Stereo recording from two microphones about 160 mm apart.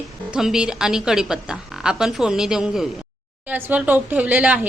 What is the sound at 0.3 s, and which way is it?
A woman's voice, 5° right (ahead or behind).